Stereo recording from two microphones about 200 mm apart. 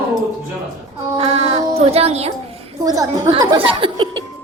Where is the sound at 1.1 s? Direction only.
30° right (ahead or behind).